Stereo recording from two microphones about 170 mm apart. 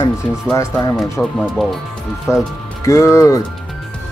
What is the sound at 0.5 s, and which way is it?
Speech, 15° left (ahead or behind).